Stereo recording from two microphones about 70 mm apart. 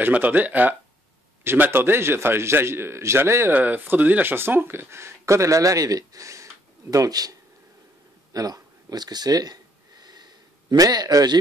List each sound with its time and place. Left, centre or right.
0.0 s a man's voice: right
3.5 s speech: right
8.3 s a sound: right